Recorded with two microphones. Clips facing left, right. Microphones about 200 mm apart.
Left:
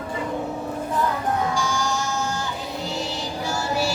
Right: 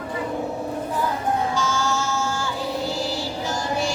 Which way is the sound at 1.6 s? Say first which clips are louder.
Right 1 dB; 15° left (ahead or behind).